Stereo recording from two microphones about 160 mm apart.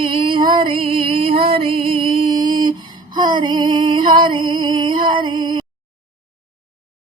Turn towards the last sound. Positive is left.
turn(degrees=-30)  # may be behind; listen again after turning